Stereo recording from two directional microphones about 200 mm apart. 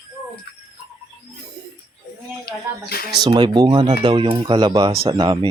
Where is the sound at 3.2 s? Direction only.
20° right (ahead or behind).